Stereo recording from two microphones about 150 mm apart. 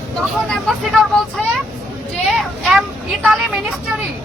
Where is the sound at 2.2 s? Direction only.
Centre (ahead or behind).